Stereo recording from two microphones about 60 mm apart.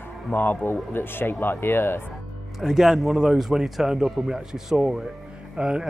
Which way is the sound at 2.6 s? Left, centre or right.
Centre.